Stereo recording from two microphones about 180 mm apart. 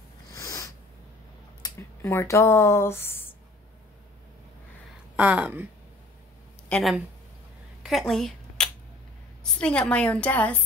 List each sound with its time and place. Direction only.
0.3 s a sound: 20° left (ahead or behind)
1.6 s speech: 15° left (ahead or behind)
5.1 s speech: 5° right (ahead or behind)
6.7 s speech: centre (ahead or behind)
7.8 s a sound: centre (ahead or behind)
9.4 s a woman's voice: 5° left (ahead or behind)